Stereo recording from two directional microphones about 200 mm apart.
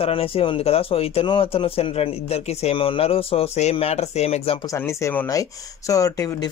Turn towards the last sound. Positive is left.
turn(degrees=15)  # may be behind; listen again after turning